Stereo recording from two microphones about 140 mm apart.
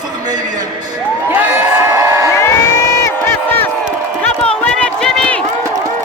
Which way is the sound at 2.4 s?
20° left (ahead or behind).